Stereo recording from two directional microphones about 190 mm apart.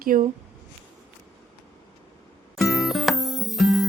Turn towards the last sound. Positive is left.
turn(degrees=0)  # may be behind; listen again after turning